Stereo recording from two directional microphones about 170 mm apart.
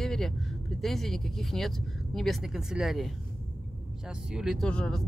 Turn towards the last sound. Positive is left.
turn(degrees=5)  # may be behind; listen again after turning